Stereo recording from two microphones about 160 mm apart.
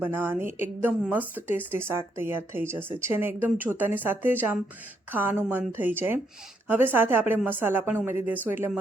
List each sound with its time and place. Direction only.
0.0 s a woman's voice: 15° right (ahead or behind)